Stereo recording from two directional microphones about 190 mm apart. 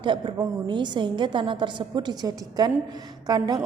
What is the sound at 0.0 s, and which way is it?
A woman's voice, 25° right (ahead or behind).